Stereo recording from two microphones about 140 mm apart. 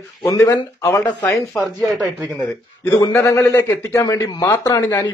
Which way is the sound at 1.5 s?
Centre (ahead or behind).